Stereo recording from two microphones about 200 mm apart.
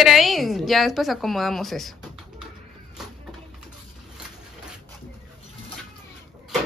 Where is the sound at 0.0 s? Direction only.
Centre (ahead or behind).